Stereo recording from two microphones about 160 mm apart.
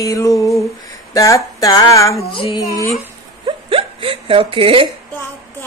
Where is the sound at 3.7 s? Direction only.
35° right (ahead or behind).